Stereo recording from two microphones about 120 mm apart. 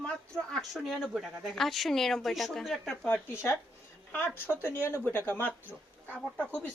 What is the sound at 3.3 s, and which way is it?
Speech, 25° left (ahead or behind).